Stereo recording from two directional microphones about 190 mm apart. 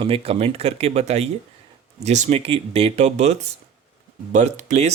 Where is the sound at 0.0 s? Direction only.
30° right (ahead or behind).